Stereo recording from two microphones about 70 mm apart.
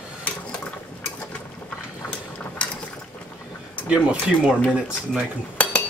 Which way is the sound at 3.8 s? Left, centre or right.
Centre.